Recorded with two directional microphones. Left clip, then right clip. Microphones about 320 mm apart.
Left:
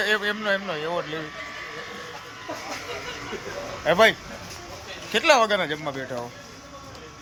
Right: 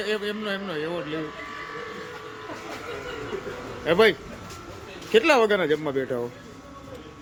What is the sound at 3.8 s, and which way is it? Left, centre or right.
Speech, centre.